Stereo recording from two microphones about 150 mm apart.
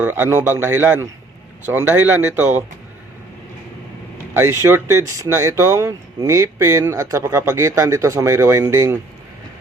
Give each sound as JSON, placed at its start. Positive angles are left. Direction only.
{"t": 0.0, "sound": "a man's voice", "side_deg": -15}
{"t": 4.4, "sound": "speech", "side_deg": -20}